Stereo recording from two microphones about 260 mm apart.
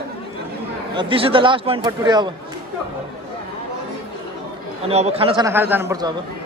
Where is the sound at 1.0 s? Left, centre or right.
Centre.